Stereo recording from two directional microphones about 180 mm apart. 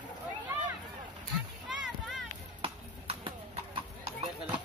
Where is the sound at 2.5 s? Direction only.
30° right (ahead or behind).